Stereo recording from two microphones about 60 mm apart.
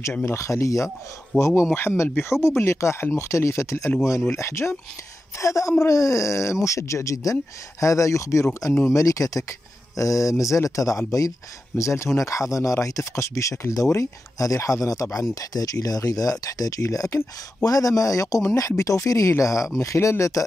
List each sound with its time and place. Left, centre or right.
0.2 s speech: left
11.7 s speech: left
12.2 s speech: left
15.5 s speech: left
16.8 s speech: left
17.6 s speech: left
18.4 s speech: left